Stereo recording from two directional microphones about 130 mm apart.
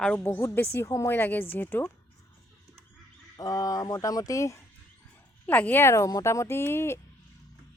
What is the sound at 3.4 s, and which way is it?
Speech, 30° left (ahead or behind).